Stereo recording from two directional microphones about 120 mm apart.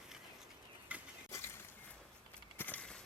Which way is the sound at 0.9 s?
10° right (ahead or behind).